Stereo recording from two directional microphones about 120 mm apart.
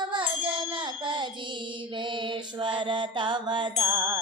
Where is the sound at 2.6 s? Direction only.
40° right (ahead or behind).